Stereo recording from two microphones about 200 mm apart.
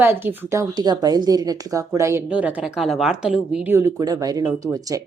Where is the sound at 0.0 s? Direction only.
10° right (ahead or behind).